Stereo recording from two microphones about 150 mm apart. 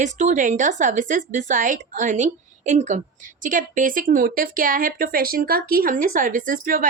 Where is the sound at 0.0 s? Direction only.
55° right (ahead or behind).